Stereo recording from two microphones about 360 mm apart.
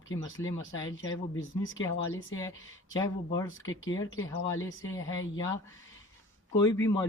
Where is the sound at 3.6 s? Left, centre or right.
Left.